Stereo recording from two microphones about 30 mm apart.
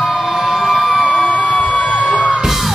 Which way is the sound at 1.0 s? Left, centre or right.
Left.